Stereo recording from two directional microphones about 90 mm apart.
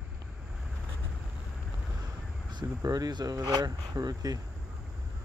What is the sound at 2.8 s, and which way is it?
Speech, 45° right (ahead or behind).